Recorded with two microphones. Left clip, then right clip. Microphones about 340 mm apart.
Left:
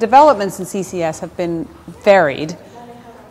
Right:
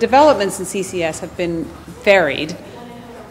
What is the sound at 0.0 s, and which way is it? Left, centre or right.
A woman's voice, left.